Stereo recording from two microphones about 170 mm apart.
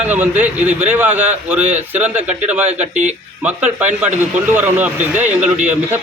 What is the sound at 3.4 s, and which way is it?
A man's voice, 10° right (ahead or behind).